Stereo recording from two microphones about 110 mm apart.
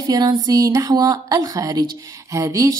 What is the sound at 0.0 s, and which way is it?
A woman's voice, 35° right (ahead or behind).